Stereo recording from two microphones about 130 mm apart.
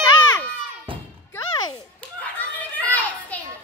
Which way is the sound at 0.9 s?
45° right (ahead or behind).